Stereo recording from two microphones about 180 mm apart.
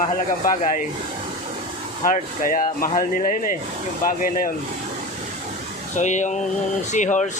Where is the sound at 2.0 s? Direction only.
50° left (ahead or behind).